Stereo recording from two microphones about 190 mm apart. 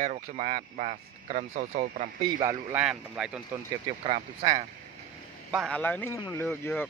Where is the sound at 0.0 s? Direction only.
40° right (ahead or behind).